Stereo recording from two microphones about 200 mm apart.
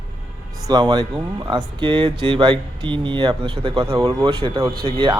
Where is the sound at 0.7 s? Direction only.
20° right (ahead or behind).